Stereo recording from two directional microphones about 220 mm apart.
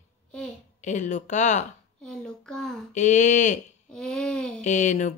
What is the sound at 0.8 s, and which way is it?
Speech, 35° left (ahead or behind).